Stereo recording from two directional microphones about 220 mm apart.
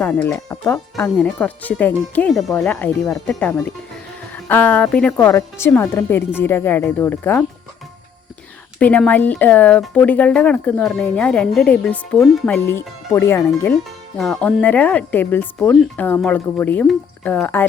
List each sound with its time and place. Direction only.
0.0 s speech: 10° left (ahead or behind)
8.8 s speech: 5° left (ahead or behind)